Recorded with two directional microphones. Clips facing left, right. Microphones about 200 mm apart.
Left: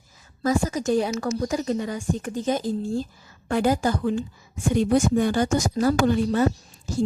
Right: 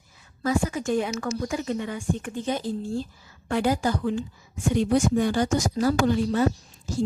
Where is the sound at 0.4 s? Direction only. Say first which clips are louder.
Left 2 dB; 40° left (ahead or behind).